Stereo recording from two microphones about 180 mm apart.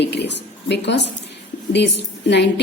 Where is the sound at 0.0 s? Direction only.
70° left (ahead or behind).